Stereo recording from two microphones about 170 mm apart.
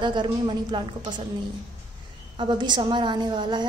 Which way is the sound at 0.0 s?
25° right (ahead or behind).